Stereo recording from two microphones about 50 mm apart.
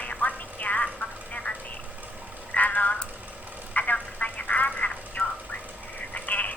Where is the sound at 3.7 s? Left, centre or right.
Left.